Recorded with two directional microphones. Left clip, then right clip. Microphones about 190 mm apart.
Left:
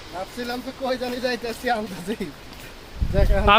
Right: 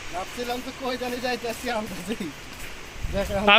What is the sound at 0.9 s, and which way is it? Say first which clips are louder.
Speech: left 3 dB; 15° left (ahead or behind).